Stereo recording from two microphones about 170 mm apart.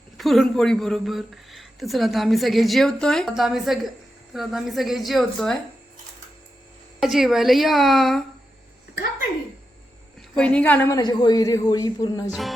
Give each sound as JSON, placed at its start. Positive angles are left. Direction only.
{"t": 0.2, "sound": "speech", "side_deg": 0}
{"t": 7.0, "sound": "speech", "side_deg": 0}
{"t": 10.2, "sound": "a woman's voice", "side_deg": 5}
{"t": 11.0, "sound": "speech", "side_deg": 25}
{"t": 12.3, "sound": "speech", "side_deg": 0}